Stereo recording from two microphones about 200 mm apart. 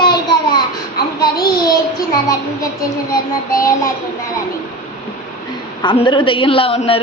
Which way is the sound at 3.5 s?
15° left (ahead or behind).